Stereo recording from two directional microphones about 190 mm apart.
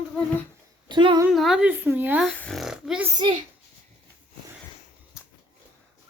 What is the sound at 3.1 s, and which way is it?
Speech, 25° right (ahead or behind).